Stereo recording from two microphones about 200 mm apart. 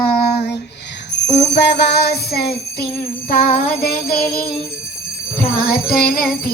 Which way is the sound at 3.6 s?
50° left (ahead or behind).